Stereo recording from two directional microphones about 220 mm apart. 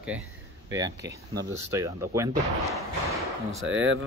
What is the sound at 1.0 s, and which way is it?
Speech, 50° right (ahead or behind).